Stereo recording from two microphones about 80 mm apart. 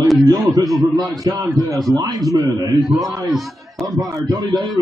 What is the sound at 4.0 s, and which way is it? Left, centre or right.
Speech, right.